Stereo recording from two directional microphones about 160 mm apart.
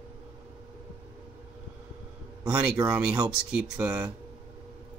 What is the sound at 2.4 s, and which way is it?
Speech, 20° right (ahead or behind).